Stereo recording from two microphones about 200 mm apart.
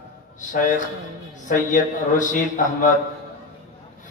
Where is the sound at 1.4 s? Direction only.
40° left (ahead or behind).